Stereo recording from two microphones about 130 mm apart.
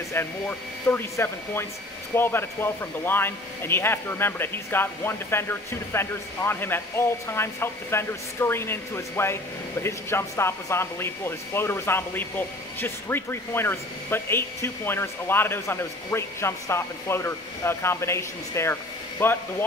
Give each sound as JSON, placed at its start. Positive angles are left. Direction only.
{"t": 0.1, "sound": "speech", "side_deg": 15}